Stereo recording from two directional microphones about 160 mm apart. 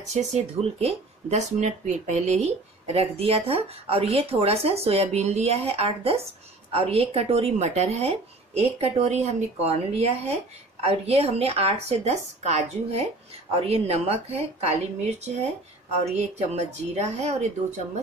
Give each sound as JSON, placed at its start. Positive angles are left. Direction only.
{"t": 0.1, "sound": "a woman's voice", "side_deg": -45}